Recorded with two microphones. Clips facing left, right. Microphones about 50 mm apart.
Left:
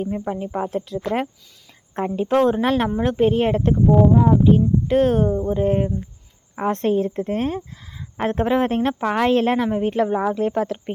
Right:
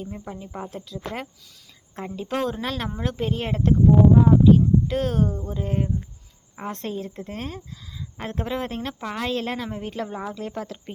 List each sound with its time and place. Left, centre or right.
0.0 s a woman's voice: left